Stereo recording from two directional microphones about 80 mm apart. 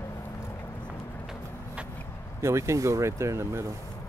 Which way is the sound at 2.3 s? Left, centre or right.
Right.